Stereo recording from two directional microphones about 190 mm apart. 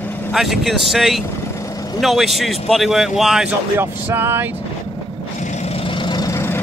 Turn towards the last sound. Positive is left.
turn(degrees=15)  # may be behind; listen again after turning